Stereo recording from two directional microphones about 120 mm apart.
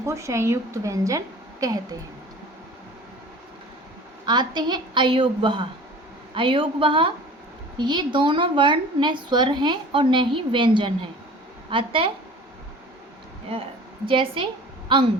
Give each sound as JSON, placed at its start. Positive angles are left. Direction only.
{"t": 0.0, "sound": "a woman's voice", "side_deg": -25}
{"t": 4.3, "sound": "a woman's voice", "side_deg": -40}
{"t": 13.5, "sound": "a woman's voice", "side_deg": -50}